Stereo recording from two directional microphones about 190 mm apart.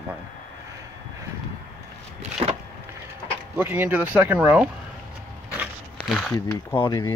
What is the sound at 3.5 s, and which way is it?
Speech, 10° right (ahead or behind).